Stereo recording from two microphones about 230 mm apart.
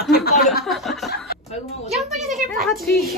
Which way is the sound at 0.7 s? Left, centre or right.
Centre.